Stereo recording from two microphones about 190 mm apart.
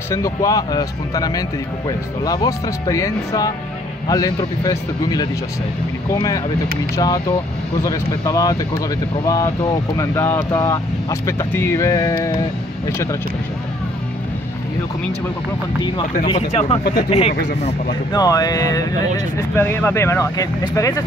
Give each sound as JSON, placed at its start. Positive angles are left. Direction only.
{"t": 0.1, "sound": "speech", "side_deg": 15}
{"t": 16.3, "sound": "speech", "side_deg": 30}
{"t": 18.1, "sound": "speech", "side_deg": 20}